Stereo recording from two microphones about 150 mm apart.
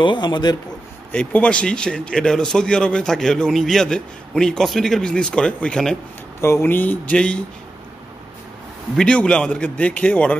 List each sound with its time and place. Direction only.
0.0 s a man's voice: 30° left (ahead or behind)
1.1 s a man's voice: 10° left (ahead or behind)
6.4 s a man's voice: 15° left (ahead or behind)
8.9 s a man's voice: 5° left (ahead or behind)